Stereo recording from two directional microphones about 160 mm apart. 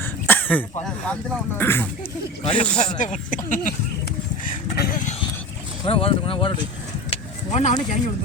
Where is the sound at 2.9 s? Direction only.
55° left (ahead or behind).